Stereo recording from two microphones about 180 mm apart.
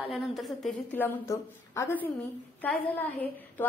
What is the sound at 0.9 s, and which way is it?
A woman's voice, 15° left (ahead or behind).